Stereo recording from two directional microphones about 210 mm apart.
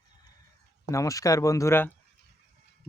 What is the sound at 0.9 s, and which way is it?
Speech, 15° left (ahead or behind).